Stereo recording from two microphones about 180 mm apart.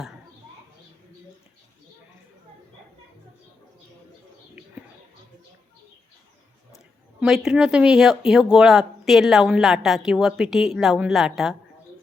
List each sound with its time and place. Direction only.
7.2 s speech: 5° right (ahead or behind)